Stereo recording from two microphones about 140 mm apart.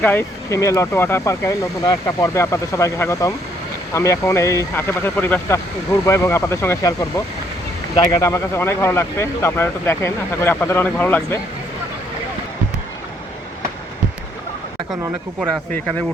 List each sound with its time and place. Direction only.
0.0 s speech: 15° left (ahead or behind)